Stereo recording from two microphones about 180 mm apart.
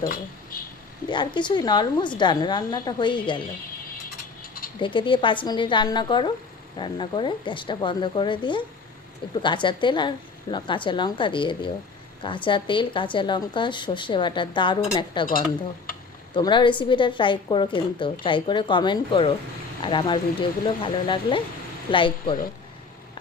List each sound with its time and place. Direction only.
1.0 s a woman's voice: 25° left (ahead or behind)
4.8 s a woman's voice: 25° left (ahead or behind)
16.3 s a woman's voice: 25° left (ahead or behind)